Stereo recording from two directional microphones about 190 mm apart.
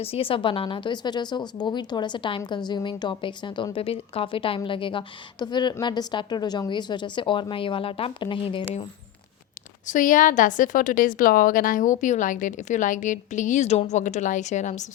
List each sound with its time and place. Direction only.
0.0 s a woman's voice: 30° left (ahead or behind)
9.8 s a woman's voice: 45° left (ahead or behind)